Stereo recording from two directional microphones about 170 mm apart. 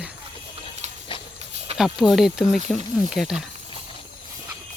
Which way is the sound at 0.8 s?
40° right (ahead or behind).